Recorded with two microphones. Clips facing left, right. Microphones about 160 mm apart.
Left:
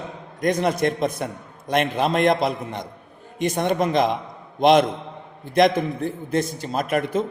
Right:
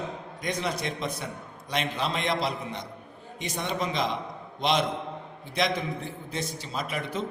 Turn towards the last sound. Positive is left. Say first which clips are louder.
# left 9 dB
turn(degrees=50)  # may be behind; listen again after turning